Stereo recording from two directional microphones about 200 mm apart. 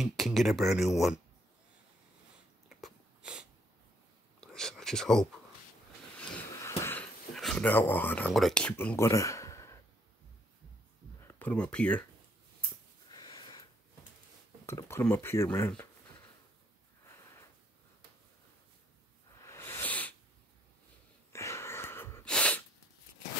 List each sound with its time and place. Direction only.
0.0 s speech: centre (ahead or behind)
2.8 s a sound: 5° right (ahead or behind)
4.4 s whispering: 5° left (ahead or behind)
6.8 s speech: 10° left (ahead or behind)
11.2 s speech: 10° left (ahead or behind)
13.1 s a sound: 20° left (ahead or behind)
14.7 s speech: 15° left (ahead or behind)
19.4 s hiss: 15° left (ahead or behind)
21.3 s sneeze: 15° left (ahead or behind)